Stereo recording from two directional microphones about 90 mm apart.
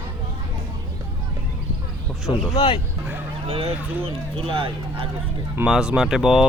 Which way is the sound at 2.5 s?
90° left.